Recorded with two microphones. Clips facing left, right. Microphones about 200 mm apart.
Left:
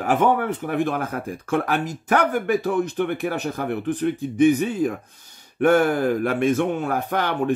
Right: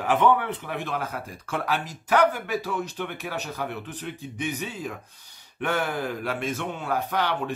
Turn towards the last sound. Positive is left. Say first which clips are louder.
# left 4 dB
turn(degrees=50)  # may be behind; listen again after turning